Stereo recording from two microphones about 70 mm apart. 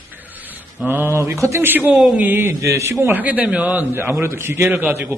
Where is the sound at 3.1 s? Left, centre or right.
Right.